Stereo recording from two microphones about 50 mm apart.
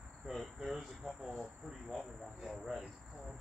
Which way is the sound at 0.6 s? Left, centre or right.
Centre.